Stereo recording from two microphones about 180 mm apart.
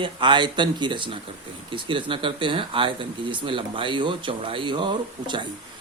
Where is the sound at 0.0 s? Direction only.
25° right (ahead or behind).